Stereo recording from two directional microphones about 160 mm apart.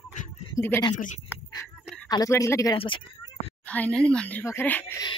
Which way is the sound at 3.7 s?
10° left (ahead or behind).